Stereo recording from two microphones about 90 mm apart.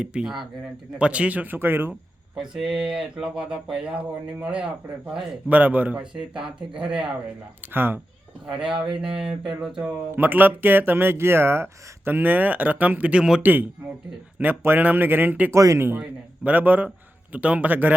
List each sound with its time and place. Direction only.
0.0 s speech: 10° right (ahead or behind)
2.4 s speech: 10° right (ahead or behind)
7.7 s speech: 25° right (ahead or behind)
8.4 s speech: 5° right (ahead or behind)
10.2 s speech: 20° right (ahead or behind)
13.4 s speech: 20° right (ahead or behind)
15.5 s speech: 35° right (ahead or behind)
16.0 s speech: 15° right (ahead or behind)